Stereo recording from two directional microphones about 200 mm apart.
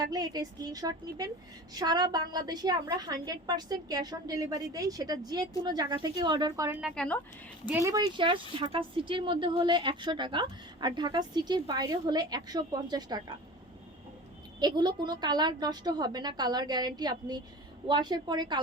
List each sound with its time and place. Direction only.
0.0 s a woman's voice: 20° right (ahead or behind)
6.9 s speech: 5° left (ahead or behind)
7.7 s a woman's voice: 15° right (ahead or behind)
14.6 s a woman's voice: 20° right (ahead or behind)